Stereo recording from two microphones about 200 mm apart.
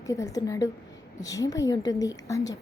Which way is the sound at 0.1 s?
15° left (ahead or behind).